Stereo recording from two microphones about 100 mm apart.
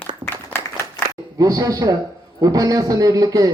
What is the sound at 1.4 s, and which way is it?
Speech, 40° right (ahead or behind).